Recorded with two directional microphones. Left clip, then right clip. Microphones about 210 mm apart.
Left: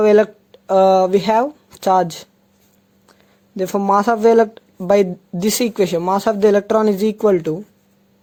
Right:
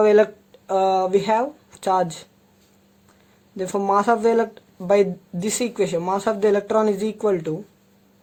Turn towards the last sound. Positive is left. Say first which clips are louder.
# left 6 dB
turn(degrees=35)  # may be behind; listen again after turning